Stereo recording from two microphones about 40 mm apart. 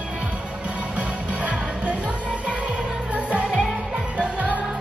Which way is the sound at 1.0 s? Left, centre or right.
Right.